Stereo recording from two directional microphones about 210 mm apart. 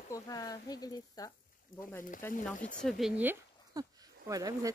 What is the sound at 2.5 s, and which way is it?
Speech, 35° left (ahead or behind).